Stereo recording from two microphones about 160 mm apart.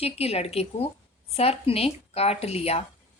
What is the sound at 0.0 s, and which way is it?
A woman's voice, 40° left (ahead or behind).